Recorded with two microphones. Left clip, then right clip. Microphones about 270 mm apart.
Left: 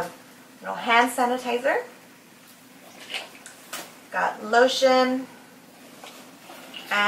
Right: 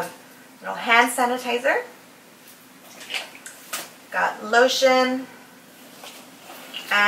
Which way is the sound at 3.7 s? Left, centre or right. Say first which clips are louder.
Right 3 dB; centre.